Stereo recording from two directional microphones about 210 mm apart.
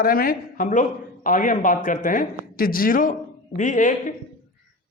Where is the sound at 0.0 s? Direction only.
45° left (ahead or behind).